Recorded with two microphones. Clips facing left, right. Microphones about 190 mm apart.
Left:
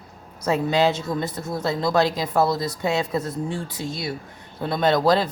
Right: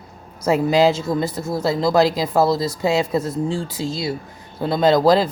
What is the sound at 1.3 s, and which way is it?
Speech, 25° right (ahead or behind).